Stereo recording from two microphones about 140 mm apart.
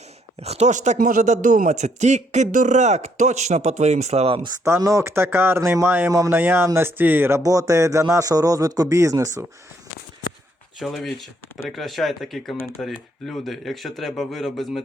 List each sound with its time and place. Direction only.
0.4 s a man's voice: 50° right (ahead or behind)
4.6 s speech: 20° right (ahead or behind)
10.8 s speech: centre (ahead or behind)